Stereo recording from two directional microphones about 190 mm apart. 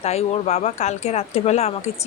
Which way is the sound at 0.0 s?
35° left (ahead or behind).